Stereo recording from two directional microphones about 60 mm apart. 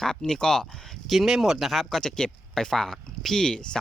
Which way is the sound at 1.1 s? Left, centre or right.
Centre.